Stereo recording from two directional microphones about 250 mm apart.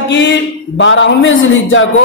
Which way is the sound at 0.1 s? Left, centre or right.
Left.